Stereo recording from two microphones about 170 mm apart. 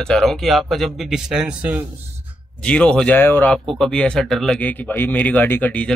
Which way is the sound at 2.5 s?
5° left (ahead or behind).